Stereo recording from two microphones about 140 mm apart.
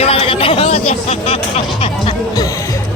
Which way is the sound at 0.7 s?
45° left (ahead or behind).